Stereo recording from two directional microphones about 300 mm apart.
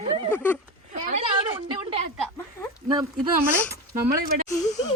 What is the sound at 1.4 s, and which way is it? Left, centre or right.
A woman's voice, centre.